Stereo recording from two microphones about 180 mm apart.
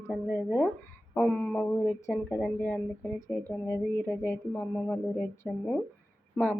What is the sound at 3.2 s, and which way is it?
Speech, 15° left (ahead or behind).